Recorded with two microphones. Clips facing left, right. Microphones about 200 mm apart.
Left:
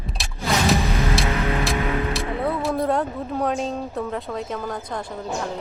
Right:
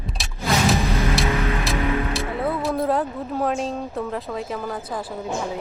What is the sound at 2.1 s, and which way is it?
Speech, centre (ahead or behind).